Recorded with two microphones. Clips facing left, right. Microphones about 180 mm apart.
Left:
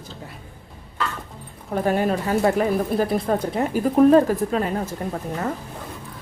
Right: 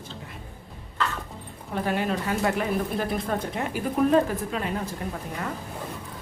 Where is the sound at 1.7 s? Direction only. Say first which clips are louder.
Left 5 dB; 45° left (ahead or behind).